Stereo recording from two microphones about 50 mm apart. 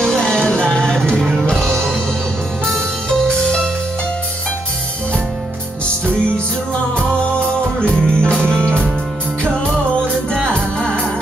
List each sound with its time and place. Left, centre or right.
0.0 s music: centre
7.0 s music: left
10.3 s music: centre